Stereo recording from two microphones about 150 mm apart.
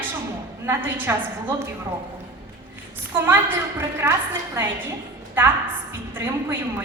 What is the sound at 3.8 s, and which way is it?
Speech, 15° right (ahead or behind).